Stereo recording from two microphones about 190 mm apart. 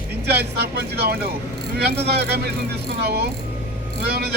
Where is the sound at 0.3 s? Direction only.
60° right (ahead or behind).